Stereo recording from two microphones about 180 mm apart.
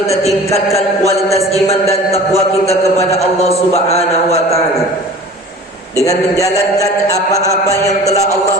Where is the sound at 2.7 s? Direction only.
35° left (ahead or behind).